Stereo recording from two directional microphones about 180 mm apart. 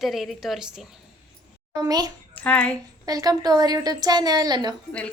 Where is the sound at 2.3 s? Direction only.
10° left (ahead or behind).